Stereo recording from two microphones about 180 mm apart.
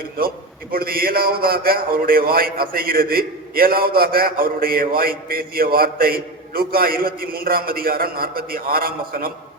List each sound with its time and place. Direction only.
0.7 s a man's voice: 55° right (ahead or behind)